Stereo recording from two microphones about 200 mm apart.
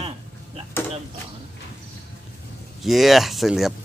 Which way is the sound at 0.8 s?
10° left (ahead or behind).